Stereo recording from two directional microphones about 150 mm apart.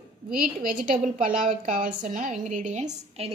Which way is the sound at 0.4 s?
70° right (ahead or behind).